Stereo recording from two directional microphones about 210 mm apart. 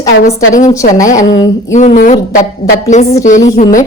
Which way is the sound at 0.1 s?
65° left (ahead or behind).